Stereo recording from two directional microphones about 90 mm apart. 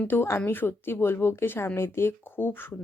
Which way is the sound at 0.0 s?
25° left (ahead or behind).